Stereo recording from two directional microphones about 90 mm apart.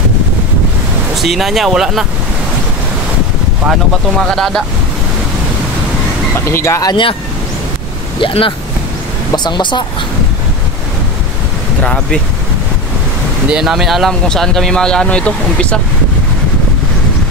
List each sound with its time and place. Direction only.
1.1 s speech: centre (ahead or behind)
4.2 s speech: 5° left (ahead or behind)
6.5 s speech: 30° left (ahead or behind)
8.2 s speech: 70° left (ahead or behind)
9.3 s speech: 55° left (ahead or behind)
11.8 s speech: 10° left (ahead or behind)
13.5 s speech: 5° right (ahead or behind); by 15.8 s 10° left (ahead or behind)